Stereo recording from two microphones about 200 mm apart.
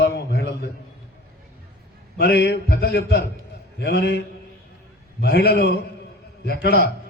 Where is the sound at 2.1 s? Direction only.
55° left (ahead or behind).